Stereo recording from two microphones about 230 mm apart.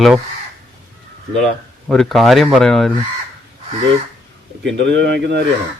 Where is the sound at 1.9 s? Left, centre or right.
Centre.